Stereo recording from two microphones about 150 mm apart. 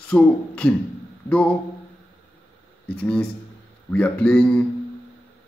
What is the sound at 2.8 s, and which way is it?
Speech, 10° left (ahead or behind).